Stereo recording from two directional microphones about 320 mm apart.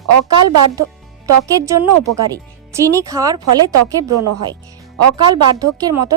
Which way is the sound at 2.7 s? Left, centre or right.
Centre.